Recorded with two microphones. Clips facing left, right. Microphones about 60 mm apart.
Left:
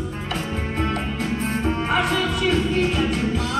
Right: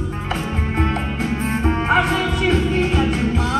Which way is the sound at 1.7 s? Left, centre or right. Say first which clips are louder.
Right 4 dB; right.